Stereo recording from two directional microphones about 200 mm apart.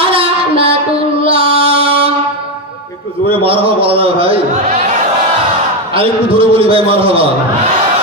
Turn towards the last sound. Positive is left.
turn(degrees=-30)  # may be behind; listen again after turning